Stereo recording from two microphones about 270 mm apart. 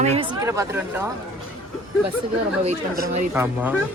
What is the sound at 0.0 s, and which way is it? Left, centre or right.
Speech, right.